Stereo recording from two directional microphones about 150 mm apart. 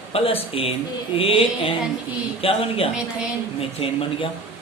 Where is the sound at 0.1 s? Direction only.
40° left (ahead or behind).